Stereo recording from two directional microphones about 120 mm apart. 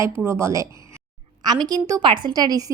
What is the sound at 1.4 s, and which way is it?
Speech, 35° right (ahead or behind).